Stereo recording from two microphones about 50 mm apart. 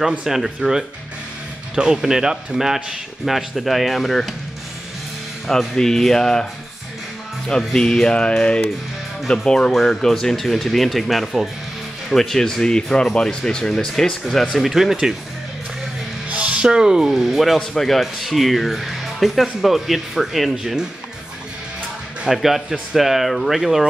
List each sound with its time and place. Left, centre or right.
0.2 s speech: centre
5.8 s speech: centre
7.4 s speech: centre
9.7 s speech: centre
14.5 s speech: centre
16.3 s speech: right; by 20.8 s centre
22.3 s speech: centre